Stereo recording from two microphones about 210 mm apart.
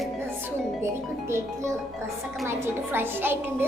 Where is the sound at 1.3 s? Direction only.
15° right (ahead or behind).